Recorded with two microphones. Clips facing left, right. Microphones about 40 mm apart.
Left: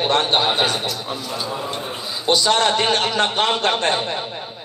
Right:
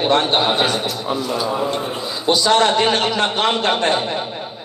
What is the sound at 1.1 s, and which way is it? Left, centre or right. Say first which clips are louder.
Speech: right 6 dB; centre.